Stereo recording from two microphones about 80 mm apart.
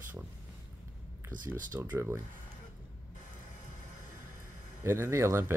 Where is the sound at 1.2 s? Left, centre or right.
Right.